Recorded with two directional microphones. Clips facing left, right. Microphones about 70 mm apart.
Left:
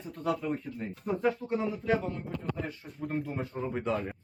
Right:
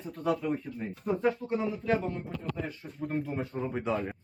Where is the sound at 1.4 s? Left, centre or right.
Centre.